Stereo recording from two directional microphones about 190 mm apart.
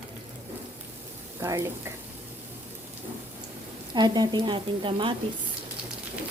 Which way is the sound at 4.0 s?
20° right (ahead or behind).